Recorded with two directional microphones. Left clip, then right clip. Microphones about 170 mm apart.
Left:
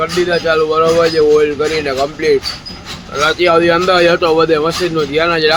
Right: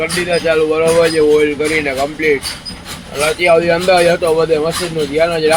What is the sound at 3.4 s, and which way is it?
A man's voice, 25° left (ahead or behind).